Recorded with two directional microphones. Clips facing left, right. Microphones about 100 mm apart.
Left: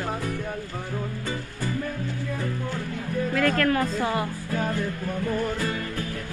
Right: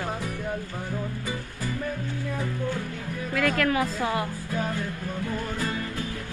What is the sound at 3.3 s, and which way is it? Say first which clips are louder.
Speech: left 1 dB; 5° right (ahead or behind).